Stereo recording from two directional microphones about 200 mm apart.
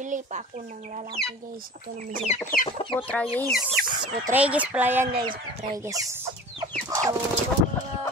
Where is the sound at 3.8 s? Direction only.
45° right (ahead or behind).